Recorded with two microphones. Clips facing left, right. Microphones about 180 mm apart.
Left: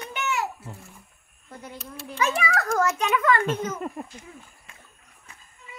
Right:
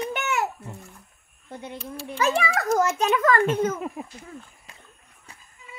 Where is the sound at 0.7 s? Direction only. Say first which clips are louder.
Right 2 dB; centre (ahead or behind).